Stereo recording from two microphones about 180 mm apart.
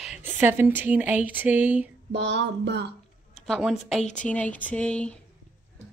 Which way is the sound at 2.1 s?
75° right (ahead or behind).